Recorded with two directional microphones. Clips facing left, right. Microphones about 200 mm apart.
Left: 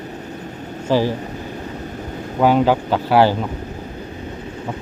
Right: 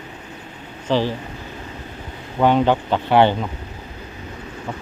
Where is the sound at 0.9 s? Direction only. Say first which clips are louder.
Left 2 dB; 10° left (ahead or behind).